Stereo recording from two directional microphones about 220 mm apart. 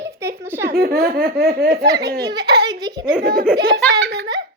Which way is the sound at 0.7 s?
45° right (ahead or behind).